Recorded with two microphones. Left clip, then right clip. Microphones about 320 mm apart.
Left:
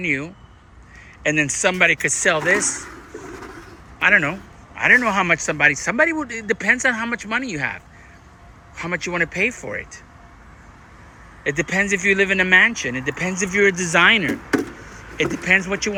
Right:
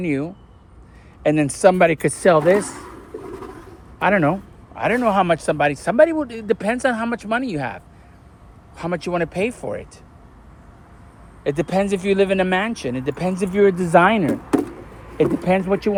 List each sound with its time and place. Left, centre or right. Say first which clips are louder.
0.0 s speech: left 1 dB; centre
4.0 s speech: left 1 dB; centre
8.8 s speech: even; centre
11.4 s speech: even; centre
15.5 s speech: even; centre